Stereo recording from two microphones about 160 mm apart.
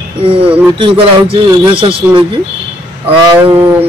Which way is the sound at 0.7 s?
35° right (ahead or behind).